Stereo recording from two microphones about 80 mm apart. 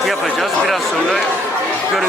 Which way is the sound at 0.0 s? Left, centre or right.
Centre.